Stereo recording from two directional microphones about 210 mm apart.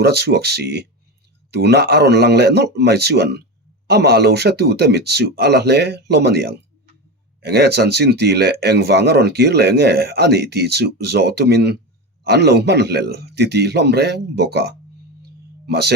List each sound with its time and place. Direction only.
0.0 s speech: 50° right (ahead or behind)